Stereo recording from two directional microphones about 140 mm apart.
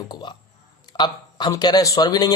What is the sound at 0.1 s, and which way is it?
Speech, 30° left (ahead or behind).